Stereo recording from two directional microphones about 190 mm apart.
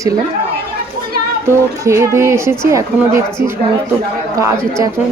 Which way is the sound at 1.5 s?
15° right (ahead or behind).